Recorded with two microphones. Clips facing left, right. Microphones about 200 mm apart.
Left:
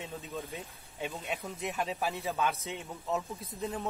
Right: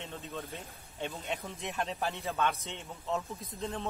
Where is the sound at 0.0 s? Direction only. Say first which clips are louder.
Left 1 dB; 5° left (ahead or behind).